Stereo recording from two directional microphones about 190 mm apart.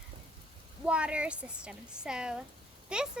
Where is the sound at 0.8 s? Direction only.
5° right (ahead or behind).